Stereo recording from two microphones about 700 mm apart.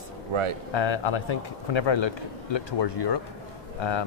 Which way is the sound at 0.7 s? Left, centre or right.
Left.